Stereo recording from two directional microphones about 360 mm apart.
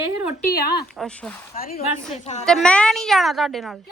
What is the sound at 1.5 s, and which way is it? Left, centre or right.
Speech, left.